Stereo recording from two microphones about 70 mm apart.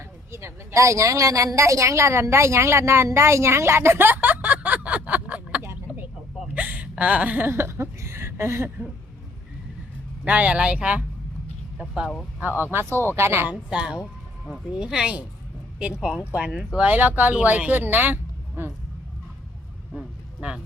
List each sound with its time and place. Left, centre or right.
0.0 s a woman's voice: right; by 5.6 s centre
6.5 s gasp: right
7.5 s speech: right
10.2 s speech: centre
12.4 s speech: right
13.7 s speech: centre
16.7 s speech: right
20.4 s speech: centre